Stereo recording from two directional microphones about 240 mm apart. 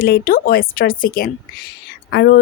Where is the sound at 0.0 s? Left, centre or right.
Left.